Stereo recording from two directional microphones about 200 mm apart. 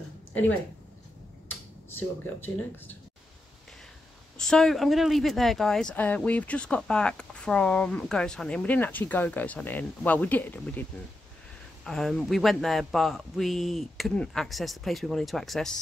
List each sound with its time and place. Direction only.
2.0 s speech: 10° left (ahead or behind)
4.4 s speech: 5° left (ahead or behind)